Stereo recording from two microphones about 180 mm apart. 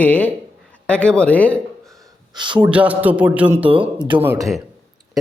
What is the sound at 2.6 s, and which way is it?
Speech, 10° right (ahead or behind).